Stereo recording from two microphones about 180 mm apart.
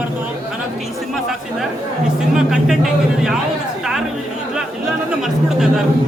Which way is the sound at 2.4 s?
5° right (ahead or behind).